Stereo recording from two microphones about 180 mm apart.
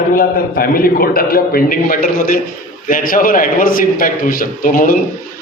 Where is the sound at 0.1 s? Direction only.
55° left (ahead or behind).